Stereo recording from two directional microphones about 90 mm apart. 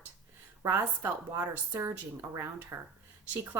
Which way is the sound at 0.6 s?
25° right (ahead or behind).